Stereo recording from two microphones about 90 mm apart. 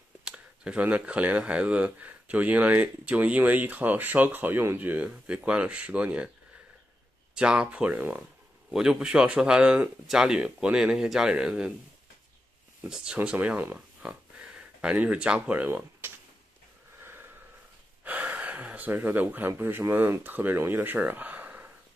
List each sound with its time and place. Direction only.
0.2 s speech: 10° right (ahead or behind)
7.3 s speech: 10° right (ahead or behind)
8.6 s speech: 5° right (ahead or behind)
12.8 s speech: 10° right (ahead or behind)
17.0 s snort: 25° right (ahead or behind)
18.0 s speech: 15° right (ahead or behind)